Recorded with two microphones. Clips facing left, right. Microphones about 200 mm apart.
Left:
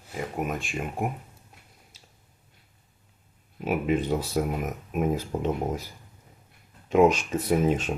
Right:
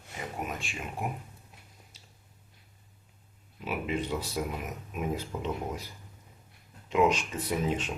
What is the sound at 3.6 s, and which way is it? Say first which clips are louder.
Speech: left 7 dB; 50° left (ahead or behind).